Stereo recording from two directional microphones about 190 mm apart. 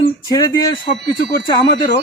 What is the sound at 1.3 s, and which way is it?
Speech, 20° left (ahead or behind).